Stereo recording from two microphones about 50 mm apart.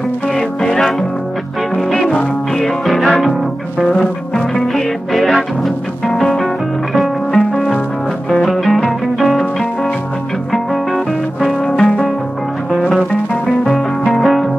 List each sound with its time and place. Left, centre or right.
0.4 s music: centre
2.5 s music: centre
3.9 s music: left
4.7 s music: centre
7.3 s music: centre
8.3 s music: centre
11.6 s music: centre
13.7 s music: centre